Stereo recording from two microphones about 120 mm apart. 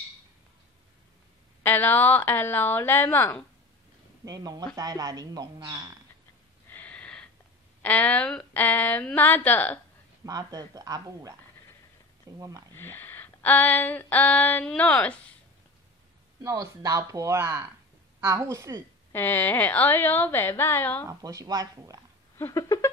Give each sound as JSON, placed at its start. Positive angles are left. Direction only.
{"t": 1.6, "sound": "a woman's voice", "side_deg": 15}
{"t": 4.2, "sound": "speech", "side_deg": -35}
{"t": 6.7, "sound": "a sound", "side_deg": 15}
{"t": 7.8, "sound": "a woman's voice", "side_deg": 10}
{"t": 10.2, "sound": "speech", "side_deg": -30}
{"t": 12.4, "sound": "speech", "side_deg": -30}
{"t": 12.7, "sound": "a sound", "side_deg": 15}
{"t": 14.7, "sound": "a woman's voice", "side_deg": 10}
{"t": 16.4, "sound": "speech", "side_deg": -30}
{"t": 19.1, "sound": "a woman's voice", "side_deg": 20}
{"t": 21.1, "sound": "speech", "side_deg": -30}
{"t": 22.4, "sound": "a sound", "side_deg": 30}